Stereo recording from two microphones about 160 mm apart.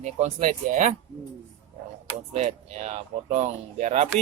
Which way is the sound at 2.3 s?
45° right (ahead or behind).